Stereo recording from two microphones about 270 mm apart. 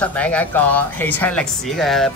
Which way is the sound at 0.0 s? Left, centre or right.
Centre.